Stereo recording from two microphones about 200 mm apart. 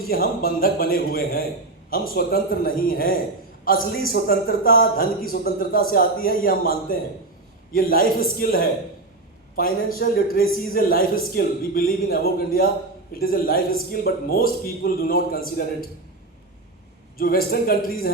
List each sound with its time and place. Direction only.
0.1 s a man's voice: 45° left (ahead or behind)
17.2 s a man's voice: 45° left (ahead or behind)